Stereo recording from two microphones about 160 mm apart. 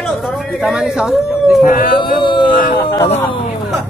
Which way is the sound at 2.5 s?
65° left (ahead or behind).